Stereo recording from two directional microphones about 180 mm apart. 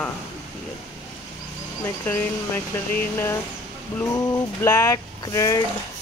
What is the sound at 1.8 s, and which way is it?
Speech, 10° left (ahead or behind).